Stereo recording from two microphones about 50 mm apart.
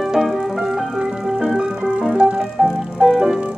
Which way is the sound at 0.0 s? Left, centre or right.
Centre.